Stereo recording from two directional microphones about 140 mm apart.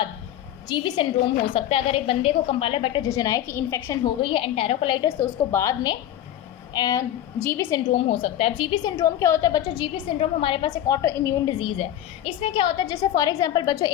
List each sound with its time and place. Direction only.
0.7 s a woman's voice: 30° left (ahead or behind)
1.5 s a woman's voice: 45° left (ahead or behind)
3.0 s a woman's voice: 25° left (ahead or behind)
3.8 s a woman's voice: 35° left (ahead or behind)
5.0 s a woman's voice: 20° left (ahead or behind)
6.7 s a woman's voice: 30° left (ahead or behind)
7.5 s a woman's voice: 20° left (ahead or behind)
7.9 s a woman's voice: 45° left (ahead or behind)
8.7 s a woman's voice: 25° left (ahead or behind)
10.7 s a woman's voice: 25° left (ahead or behind)
11.6 s a woman's voice: 40° left (ahead or behind)
12.8 s a woman's voice: 25° left (ahead or behind)